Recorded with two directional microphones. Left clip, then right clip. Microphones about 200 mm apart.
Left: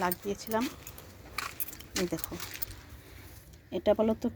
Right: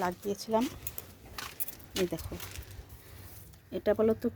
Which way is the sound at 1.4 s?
25° left (ahead or behind).